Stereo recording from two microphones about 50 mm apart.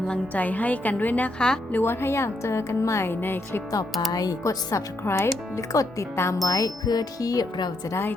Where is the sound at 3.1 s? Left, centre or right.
Left.